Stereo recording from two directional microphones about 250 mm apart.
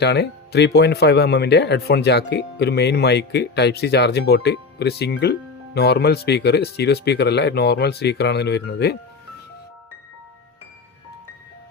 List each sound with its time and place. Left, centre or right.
0.0 s speech: left